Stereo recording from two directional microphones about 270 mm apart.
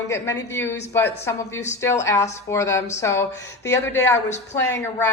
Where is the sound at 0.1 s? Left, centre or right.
Centre.